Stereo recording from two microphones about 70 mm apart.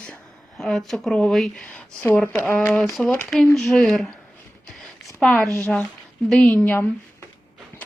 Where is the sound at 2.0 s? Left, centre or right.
Left.